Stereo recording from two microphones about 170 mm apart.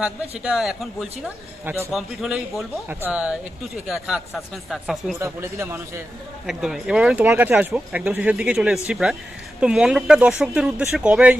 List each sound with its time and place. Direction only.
0.0 s a man's voice: 5° right (ahead or behind)
5.2 s speech: 15° right (ahead or behind)
6.4 s a man's voice: 5° right (ahead or behind)